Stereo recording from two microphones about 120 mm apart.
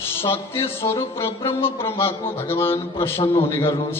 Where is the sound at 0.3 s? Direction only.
20° left (ahead or behind).